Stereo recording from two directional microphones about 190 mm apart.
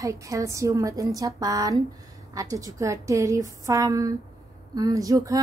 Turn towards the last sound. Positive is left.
turn(degrees=-15)  # may be behind; listen again after turning